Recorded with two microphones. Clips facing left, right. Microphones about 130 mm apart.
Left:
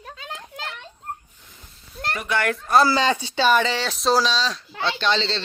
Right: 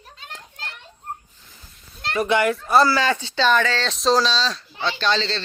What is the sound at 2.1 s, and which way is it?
Speech, 25° right (ahead or behind).